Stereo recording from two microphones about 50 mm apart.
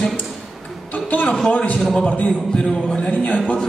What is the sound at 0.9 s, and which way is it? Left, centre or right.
Music, left.